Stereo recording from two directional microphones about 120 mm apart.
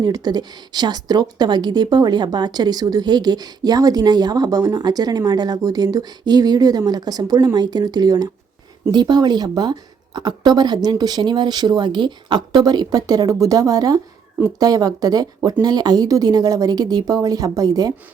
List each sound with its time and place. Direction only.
0.0 s a woman's voice: 35° right (ahead or behind)